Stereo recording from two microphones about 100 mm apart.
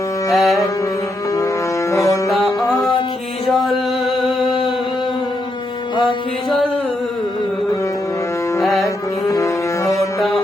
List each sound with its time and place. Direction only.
0.3 s carnatic music: centre (ahead or behind)
1.9 s music: 30° left (ahead or behind)
2.3 s music: centre (ahead or behind)
8.6 s music: centre (ahead or behind)
9.3 s music: 30° left (ahead or behind)
10.2 s music: centre (ahead or behind)